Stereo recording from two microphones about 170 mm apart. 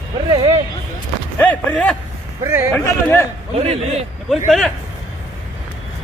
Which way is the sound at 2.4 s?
15° right (ahead or behind).